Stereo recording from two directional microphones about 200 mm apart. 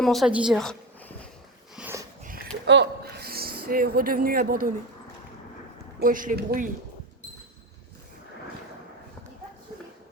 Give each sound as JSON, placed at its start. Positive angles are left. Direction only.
{"t": 0.0, "sound": "a woman's voice", "side_deg": 0}
{"t": 1.7, "sound": "sniff", "side_deg": -10}
{"t": 2.6, "sound": "speech", "side_deg": -60}
{"t": 6.0, "sound": "speech", "side_deg": -45}